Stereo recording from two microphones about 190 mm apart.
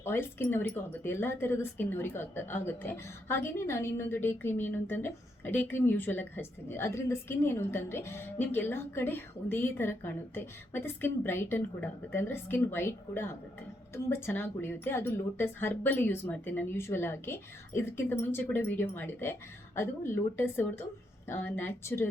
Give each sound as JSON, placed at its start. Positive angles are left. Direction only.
{"t": 0.0, "sound": "speech", "side_deg": 10}